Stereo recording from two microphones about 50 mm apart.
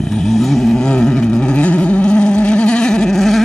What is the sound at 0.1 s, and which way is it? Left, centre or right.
Vehicle, centre.